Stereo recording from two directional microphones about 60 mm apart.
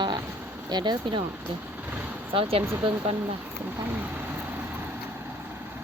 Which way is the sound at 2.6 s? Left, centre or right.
Right.